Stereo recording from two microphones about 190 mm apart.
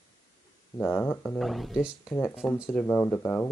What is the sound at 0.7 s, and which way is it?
Speech, 10° left (ahead or behind).